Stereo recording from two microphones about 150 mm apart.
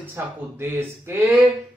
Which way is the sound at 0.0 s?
15° right (ahead or behind).